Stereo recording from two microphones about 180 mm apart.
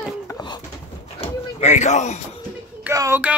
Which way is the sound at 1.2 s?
40° left (ahead or behind).